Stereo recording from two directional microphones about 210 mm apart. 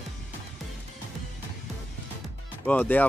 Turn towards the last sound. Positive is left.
turn(degrees=10)  # may be behind; listen again after turning